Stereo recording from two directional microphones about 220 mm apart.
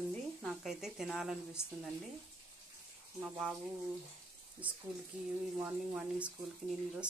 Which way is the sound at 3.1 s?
5° right (ahead or behind).